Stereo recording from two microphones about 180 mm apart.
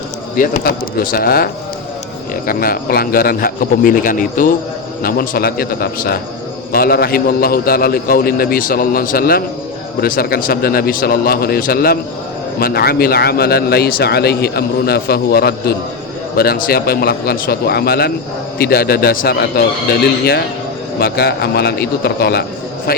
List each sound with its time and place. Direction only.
0.3 s speech: 55° left (ahead or behind)
2.5 s speech: 55° left (ahead or behind)